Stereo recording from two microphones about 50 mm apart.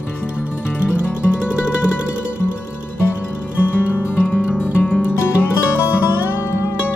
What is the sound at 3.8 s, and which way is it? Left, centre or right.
Music, left.